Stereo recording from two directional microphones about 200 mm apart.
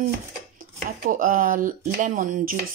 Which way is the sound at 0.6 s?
45° right (ahead or behind).